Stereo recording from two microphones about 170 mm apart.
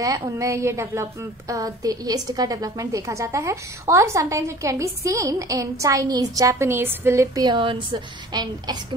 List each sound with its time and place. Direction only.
0.0 s a woman's voice: 20° right (ahead or behind)